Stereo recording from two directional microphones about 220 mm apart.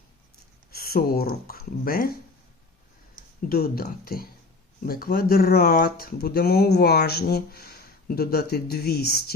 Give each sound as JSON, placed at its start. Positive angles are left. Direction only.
{"t": 0.7, "sound": "speech", "side_deg": 45}
{"t": 3.5, "sound": "speech", "side_deg": 40}